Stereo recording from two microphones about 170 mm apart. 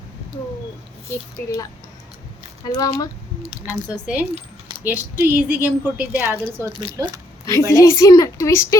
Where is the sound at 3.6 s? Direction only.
10° right (ahead or behind).